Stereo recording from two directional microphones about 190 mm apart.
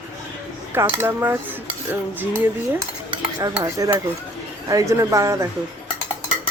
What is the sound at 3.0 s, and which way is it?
Cutlery, 15° right (ahead or behind).